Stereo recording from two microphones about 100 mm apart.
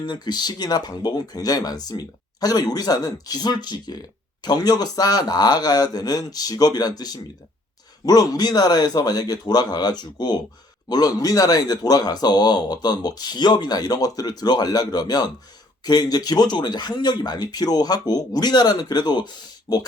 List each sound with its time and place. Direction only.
0.0 s a man's voice: 45° left (ahead or behind)